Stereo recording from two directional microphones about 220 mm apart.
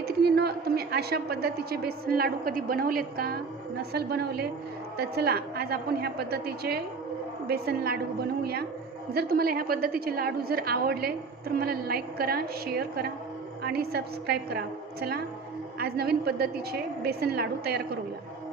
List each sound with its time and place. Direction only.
0.0 s a woman's voice: 45° right (ahead or behind)
9.1 s a woman's voice: 45° right (ahead or behind)
15.8 s a woman's voice: 45° right (ahead or behind)